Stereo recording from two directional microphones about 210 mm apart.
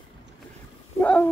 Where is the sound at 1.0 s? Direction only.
5° left (ahead or behind).